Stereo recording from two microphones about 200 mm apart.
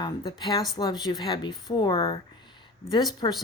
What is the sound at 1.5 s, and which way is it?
Speech, centre (ahead or behind).